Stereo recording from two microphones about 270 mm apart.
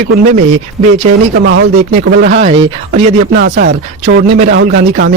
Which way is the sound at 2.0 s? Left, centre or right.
Right.